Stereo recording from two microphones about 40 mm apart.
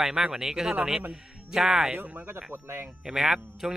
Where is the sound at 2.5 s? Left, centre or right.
Right.